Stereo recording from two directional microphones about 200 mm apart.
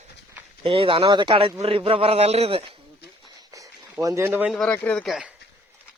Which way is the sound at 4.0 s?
15° right (ahead or behind).